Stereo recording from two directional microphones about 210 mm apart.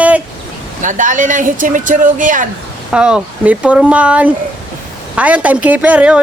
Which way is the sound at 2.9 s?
5° right (ahead or behind).